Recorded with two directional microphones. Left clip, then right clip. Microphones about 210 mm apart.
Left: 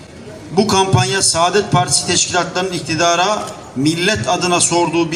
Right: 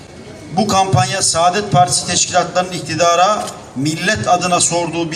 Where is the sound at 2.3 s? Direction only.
25° right (ahead or behind).